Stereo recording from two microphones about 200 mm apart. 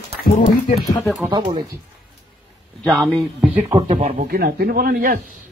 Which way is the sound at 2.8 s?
Centre (ahead or behind).